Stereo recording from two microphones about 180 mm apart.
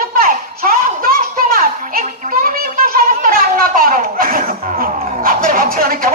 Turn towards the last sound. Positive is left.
turn(degrees=-50)  # may be behind; listen again after turning